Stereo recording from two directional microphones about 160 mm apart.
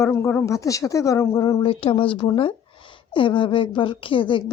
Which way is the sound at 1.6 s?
35° left (ahead or behind).